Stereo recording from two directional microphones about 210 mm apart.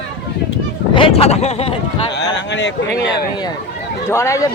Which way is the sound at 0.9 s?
25° left (ahead or behind).